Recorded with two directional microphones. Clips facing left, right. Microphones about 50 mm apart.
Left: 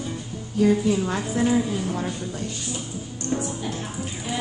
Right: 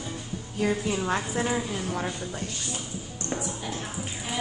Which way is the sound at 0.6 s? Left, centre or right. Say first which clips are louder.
Left 7 dB; centre.